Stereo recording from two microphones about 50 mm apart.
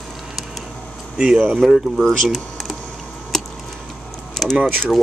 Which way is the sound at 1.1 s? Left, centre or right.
Centre.